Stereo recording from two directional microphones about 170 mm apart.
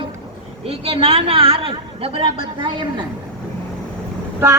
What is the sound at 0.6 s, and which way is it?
A woman's voice, 35° right (ahead or behind).